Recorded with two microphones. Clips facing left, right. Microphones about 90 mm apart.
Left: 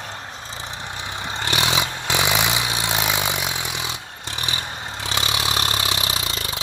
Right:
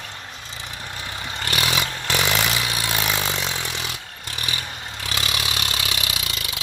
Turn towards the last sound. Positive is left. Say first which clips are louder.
# left 3 dB
turn(degrees=35)  # may be behind; listen again after turning